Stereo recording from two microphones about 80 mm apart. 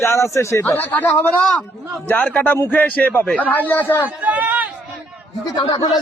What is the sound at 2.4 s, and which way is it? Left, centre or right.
A man's voice, left.